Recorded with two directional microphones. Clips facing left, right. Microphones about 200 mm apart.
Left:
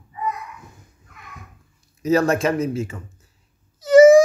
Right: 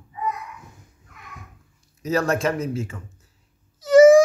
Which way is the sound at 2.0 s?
10° left (ahead or behind).